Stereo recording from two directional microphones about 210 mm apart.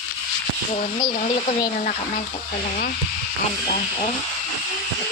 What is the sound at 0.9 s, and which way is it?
Speech, 20° left (ahead or behind).